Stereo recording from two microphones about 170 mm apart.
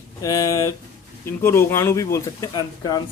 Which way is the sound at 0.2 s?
20° left (ahead or behind).